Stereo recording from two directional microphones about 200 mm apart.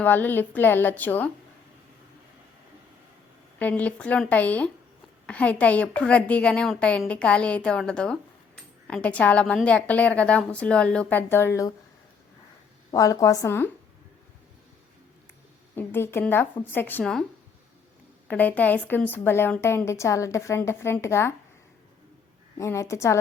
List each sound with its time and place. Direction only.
0.0 s a woman's voice: 10° left (ahead or behind)
3.6 s a woman's voice: 10° left (ahead or behind)
12.9 s a woman's voice: 15° left (ahead or behind)
15.7 s a woman's voice: 10° left (ahead or behind)
18.3 s a woman's voice: 10° left (ahead or behind)
22.5 s a woman's voice: 15° left (ahead or behind)